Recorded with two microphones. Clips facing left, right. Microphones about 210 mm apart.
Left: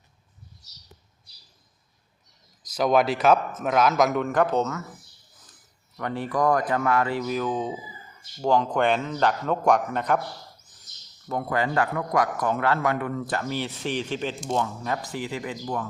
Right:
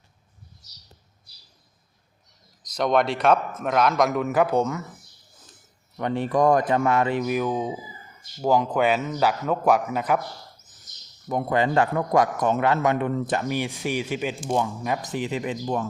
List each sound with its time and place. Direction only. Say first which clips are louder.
2.7 s a man's voice: left 1 dB; 5° left (ahead or behind); by 4.9 s 15° right (ahead or behind)
6.0 s a man's voice: right 4 dB; 20° right (ahead or behind); by 10.2 s 5° right (ahead or behind)
11.3 s a man's voice: right 3 dB; 20° right (ahead or behind)